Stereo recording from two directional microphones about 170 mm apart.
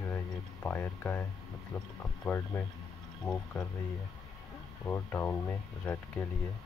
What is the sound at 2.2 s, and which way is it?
Speech, 10° left (ahead or behind).